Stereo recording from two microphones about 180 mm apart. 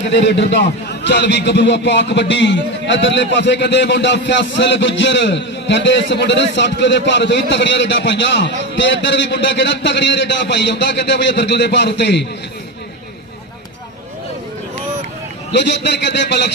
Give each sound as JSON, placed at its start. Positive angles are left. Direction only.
{"t": 0.3, "sound": "a man's voice", "side_deg": 75}
{"t": 15.5, "sound": "a man's voice", "side_deg": 75}